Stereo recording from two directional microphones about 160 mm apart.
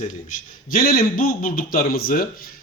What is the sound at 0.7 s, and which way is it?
A man's voice, 65° left (ahead or behind).